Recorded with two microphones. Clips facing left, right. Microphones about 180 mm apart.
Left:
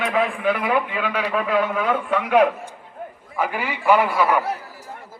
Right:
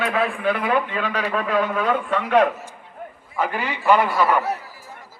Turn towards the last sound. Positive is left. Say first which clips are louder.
# even
turn(degrees=10)  # may be behind; listen again after turning